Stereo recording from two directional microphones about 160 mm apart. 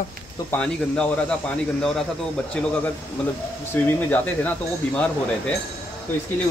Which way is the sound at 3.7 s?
10° left (ahead or behind).